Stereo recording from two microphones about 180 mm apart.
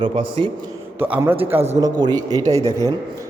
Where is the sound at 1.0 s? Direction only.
10° right (ahead or behind).